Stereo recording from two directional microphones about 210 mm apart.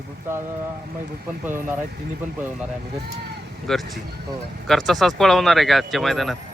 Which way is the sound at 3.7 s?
Centre (ahead or behind).